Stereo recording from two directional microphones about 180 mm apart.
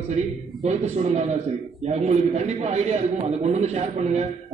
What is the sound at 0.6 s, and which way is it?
A man's voice, 35° right (ahead or behind).